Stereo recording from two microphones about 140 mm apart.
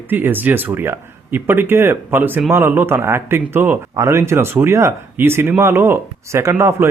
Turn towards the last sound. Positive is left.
turn(degrees=-20)  # may be behind; listen again after turning